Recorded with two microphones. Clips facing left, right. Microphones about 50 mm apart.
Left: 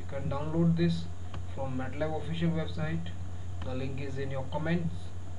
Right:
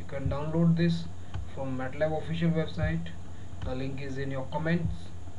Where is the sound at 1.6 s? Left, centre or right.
Centre.